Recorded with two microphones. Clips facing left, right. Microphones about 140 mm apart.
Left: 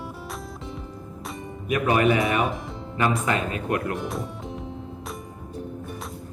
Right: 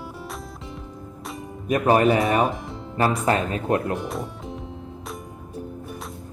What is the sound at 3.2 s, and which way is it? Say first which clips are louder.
Speech: right 4 dB; 35° right (ahead or behind).